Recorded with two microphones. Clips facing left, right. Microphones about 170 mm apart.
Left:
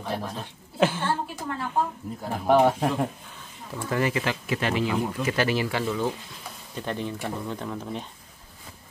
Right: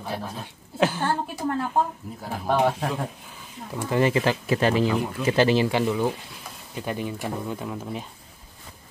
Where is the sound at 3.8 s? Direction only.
25° right (ahead or behind); by 8.0 s 5° right (ahead or behind).